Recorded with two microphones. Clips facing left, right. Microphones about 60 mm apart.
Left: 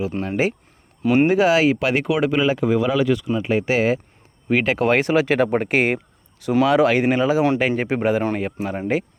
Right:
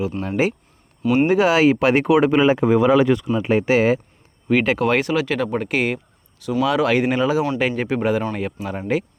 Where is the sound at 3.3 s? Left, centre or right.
Centre.